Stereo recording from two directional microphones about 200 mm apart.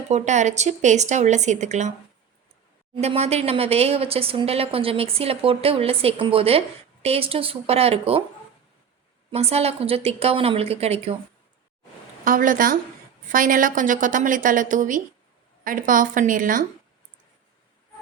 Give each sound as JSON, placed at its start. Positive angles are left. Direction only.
{"t": 0.1, "sound": "speech", "side_deg": -35}
{"t": 2.9, "sound": "speech", "side_deg": -30}
{"t": 9.3, "sound": "speech", "side_deg": -30}
{"t": 12.2, "sound": "a woman's voice", "side_deg": -40}